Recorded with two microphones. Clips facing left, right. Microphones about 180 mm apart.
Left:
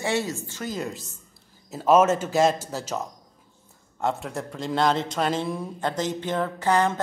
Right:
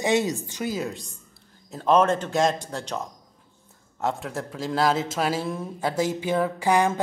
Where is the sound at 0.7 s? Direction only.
Centre (ahead or behind).